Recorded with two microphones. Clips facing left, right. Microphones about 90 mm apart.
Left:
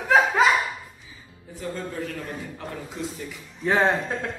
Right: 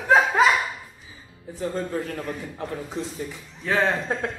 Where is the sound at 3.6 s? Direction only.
20° left (ahead or behind).